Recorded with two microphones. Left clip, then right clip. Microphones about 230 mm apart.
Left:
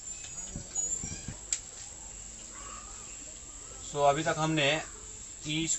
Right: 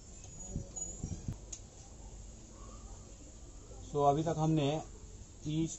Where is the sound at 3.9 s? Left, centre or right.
Left.